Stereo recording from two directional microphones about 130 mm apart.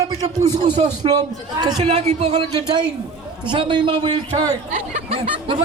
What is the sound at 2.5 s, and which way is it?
A man's voice, 40° right (ahead or behind).